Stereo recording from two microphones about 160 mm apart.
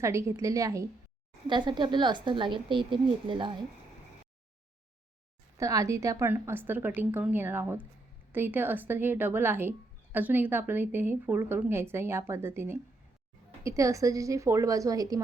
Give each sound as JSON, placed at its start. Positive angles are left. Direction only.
{"t": 0.0, "sound": "a woman's voice", "side_deg": -20}
{"t": 5.5, "sound": "a woman's voice", "side_deg": -20}